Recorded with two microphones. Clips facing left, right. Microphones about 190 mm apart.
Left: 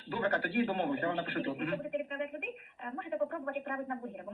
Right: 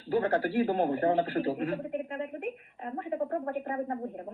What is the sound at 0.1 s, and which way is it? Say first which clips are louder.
A woman's voice: right 6 dB; 30° right (ahead or behind).